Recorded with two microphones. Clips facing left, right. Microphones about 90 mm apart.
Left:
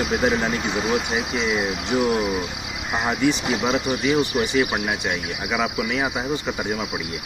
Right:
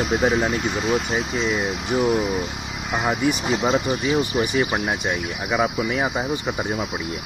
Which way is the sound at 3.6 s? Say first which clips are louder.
Even; 15° right (ahead or behind).